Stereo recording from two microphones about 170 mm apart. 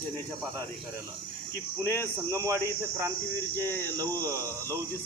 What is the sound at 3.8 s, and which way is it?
Speech, 20° right (ahead or behind).